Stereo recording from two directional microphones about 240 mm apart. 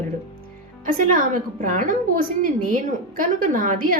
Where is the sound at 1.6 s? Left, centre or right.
Right.